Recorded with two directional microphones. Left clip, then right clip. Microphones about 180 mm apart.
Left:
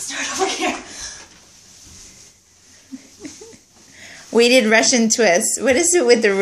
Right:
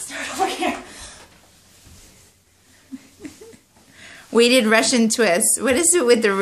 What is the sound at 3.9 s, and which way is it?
Speech, 5° right (ahead or behind).